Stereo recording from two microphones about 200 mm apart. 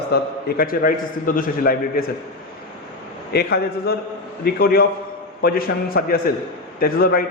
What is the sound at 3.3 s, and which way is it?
A man's voice, 55° left (ahead or behind).